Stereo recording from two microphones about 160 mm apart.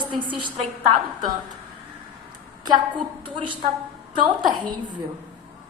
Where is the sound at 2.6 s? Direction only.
30° right (ahead or behind).